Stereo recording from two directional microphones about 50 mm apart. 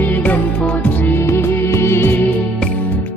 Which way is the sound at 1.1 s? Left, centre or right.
Left.